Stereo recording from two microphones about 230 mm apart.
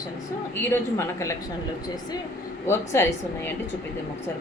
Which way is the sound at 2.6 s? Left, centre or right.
Centre.